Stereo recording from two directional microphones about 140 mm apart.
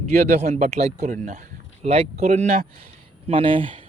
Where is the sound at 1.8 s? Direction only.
45° right (ahead or behind).